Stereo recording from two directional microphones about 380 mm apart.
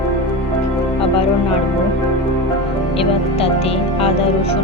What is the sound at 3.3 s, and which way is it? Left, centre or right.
Music, centre.